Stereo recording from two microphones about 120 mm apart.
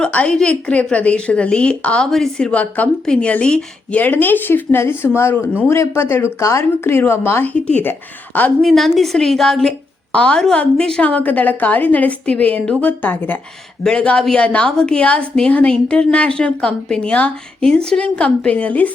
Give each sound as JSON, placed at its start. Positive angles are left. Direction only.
{"t": 0.0, "sound": "a woman's voice", "side_deg": 10}
{"t": 8.6, "sound": "a woman's voice", "side_deg": 0}